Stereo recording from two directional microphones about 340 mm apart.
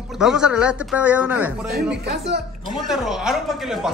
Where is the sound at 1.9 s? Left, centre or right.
Right.